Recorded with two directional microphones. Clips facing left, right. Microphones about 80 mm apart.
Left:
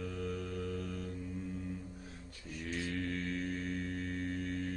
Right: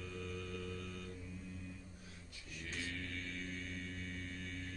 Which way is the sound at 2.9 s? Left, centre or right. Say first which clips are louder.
Left 9 dB; left.